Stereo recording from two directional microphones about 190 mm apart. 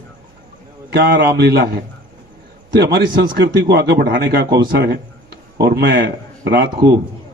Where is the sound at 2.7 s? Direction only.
60° right (ahead or behind).